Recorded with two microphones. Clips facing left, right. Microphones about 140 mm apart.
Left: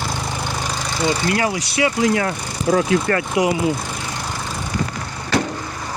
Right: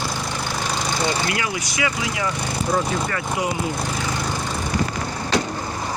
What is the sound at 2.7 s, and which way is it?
Speech, 80° left.